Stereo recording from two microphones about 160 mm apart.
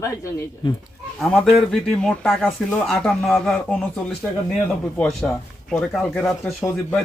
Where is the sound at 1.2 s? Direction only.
Centre (ahead or behind).